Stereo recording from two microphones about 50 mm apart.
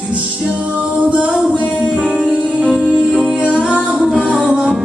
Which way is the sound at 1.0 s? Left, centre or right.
Right.